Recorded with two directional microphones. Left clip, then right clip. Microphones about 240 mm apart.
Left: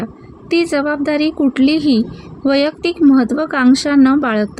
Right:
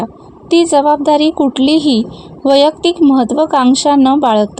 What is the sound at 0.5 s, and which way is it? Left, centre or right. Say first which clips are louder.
Speech: right 6 dB; right.